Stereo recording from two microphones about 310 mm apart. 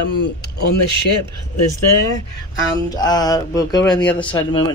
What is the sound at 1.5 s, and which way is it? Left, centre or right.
Speech, left.